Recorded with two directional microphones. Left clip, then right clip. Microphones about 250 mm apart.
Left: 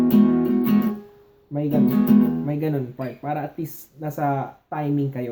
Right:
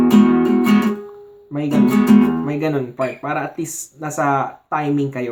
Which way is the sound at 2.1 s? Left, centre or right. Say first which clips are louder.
Right 5 dB; centre.